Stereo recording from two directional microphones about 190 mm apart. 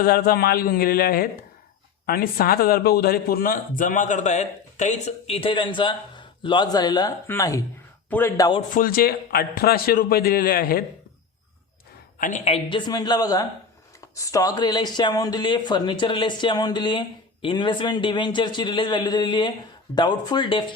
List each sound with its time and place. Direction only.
0.0 s a man's voice: 55° left (ahead or behind); by 8.6 s 20° left (ahead or behind)
8.7 s a man's voice: 50° left (ahead or behind)
12.2 s speech: 35° left (ahead or behind)